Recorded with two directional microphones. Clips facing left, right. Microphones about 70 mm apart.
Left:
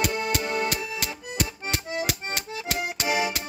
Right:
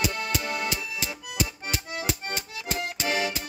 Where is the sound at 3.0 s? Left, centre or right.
Centre.